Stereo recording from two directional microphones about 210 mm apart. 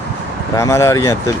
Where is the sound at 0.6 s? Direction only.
15° left (ahead or behind).